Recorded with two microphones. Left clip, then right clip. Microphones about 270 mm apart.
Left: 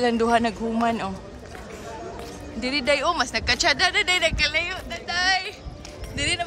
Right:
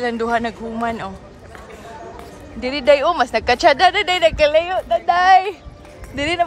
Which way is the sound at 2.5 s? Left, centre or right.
Centre.